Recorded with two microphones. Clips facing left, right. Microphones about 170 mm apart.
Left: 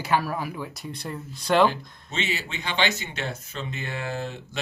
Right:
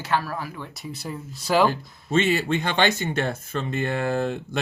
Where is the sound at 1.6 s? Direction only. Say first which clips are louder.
Right 1 dB; 50° right (ahead or behind).